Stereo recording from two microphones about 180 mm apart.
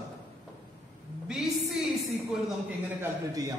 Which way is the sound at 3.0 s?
20° right (ahead or behind).